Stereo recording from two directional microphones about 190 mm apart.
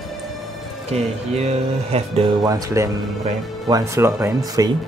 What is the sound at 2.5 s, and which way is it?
Speech, 20° right (ahead or behind).